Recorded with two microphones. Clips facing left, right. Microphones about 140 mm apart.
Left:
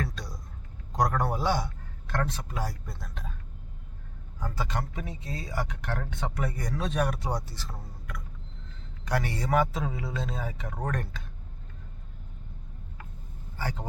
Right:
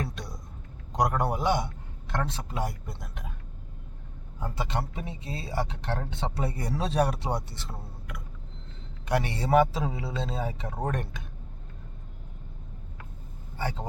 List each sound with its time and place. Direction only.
0.0 s a sound: 25° right (ahead or behind)
0.9 s speech: 20° right (ahead or behind)
4.4 s speech: 25° right (ahead or behind)
13.6 s speech: 25° right (ahead or behind)